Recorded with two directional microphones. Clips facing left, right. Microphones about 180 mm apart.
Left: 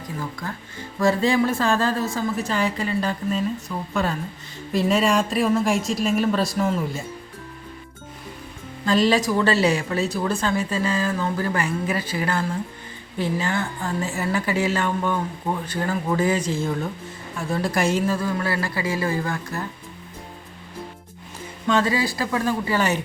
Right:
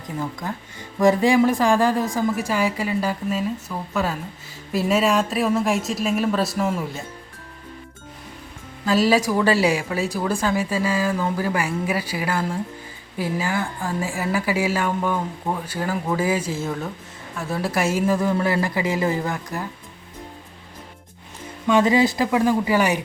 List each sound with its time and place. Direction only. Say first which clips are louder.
0.9 s a woman's voice: right 3 dB; 15° right (ahead or behind)
8.8 s a woman's voice: right 1 dB; 5° right (ahead or behind)
18.0 s a woman's voice: right 3 dB; 15° right (ahead or behind)
21.7 s a woman's voice: right 4 dB; 15° right (ahead or behind)